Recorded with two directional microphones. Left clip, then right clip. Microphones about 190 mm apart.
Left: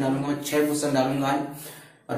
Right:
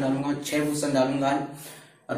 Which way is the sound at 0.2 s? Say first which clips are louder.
Left 3 dB; 10° right (ahead or behind).